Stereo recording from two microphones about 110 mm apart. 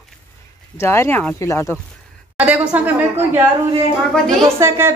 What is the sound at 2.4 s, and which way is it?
A woman's voice, 10° right (ahead or behind).